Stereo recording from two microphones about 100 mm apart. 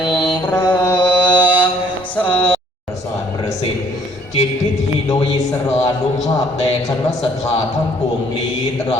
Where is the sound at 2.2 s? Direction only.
65° left (ahead or behind).